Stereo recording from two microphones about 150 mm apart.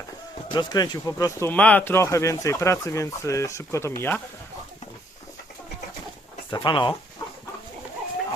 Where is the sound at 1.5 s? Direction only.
10° left (ahead or behind).